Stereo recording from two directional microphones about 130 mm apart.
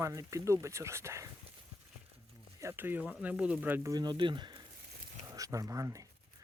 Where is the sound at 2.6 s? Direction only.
15° right (ahead or behind).